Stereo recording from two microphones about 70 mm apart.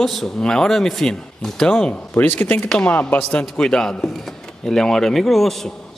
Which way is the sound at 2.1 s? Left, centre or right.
Left.